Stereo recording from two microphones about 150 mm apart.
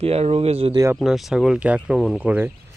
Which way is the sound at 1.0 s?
Centre (ahead or behind).